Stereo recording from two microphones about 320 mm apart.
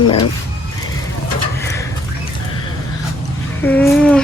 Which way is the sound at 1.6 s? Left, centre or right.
Centre.